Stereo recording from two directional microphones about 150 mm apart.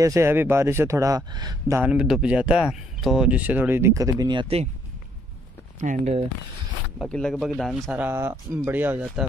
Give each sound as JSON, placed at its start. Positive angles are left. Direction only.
{"t": 0.0, "sound": "speech", "side_deg": -20}
{"t": 1.8, "sound": "speech", "side_deg": -5}
{"t": 5.8, "sound": "speech", "side_deg": -50}
{"t": 7.1, "sound": "a man's voice", "side_deg": 5}
{"t": 8.0, "sound": "speech", "side_deg": -15}